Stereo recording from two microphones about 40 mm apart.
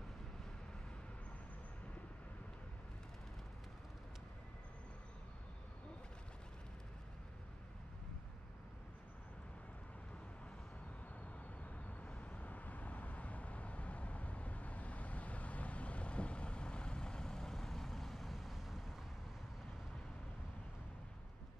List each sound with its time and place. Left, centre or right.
11.6 s vehicle: left; by 18.9 s centre